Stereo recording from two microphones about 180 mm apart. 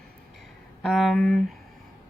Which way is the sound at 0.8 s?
Centre (ahead or behind).